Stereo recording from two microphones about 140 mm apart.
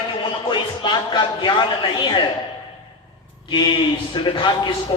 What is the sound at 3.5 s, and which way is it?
A man's voice, 35° left (ahead or behind).